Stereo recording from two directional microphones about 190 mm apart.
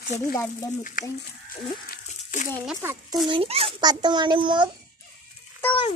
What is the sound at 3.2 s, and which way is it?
A child's voice, 30° right (ahead or behind).